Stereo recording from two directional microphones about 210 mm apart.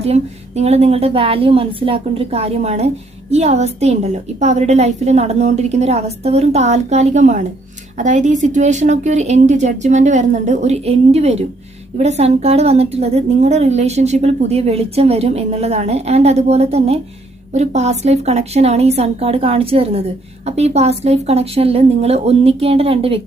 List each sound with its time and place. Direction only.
0.0 s a woman's voice: 30° right (ahead or behind)